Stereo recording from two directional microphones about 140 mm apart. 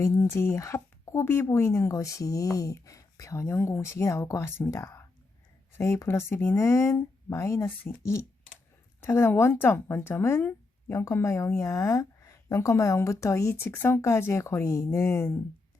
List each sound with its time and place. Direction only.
0.0 s speech: 20° left (ahead or behind)